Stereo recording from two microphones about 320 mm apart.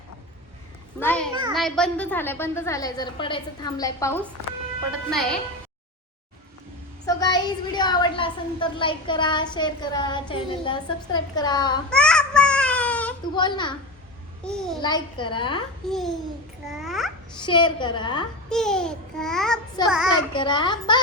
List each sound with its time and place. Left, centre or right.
0.9 s a child's voice: centre
7.0 s a woman's voice: centre
11.9 s a sound: centre
14.4 s a child's voice: centre
14.8 s a woman's voice: centre
15.9 s a child's voice: centre
17.4 s a woman's voice: centre
18.4 s a child's voice: centre
19.8 s a woman's voice: centre